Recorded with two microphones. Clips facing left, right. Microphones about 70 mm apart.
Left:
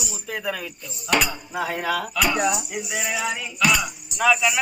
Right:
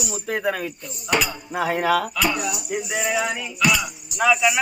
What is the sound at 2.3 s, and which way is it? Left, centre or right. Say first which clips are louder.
Speech: left 5 dB; left.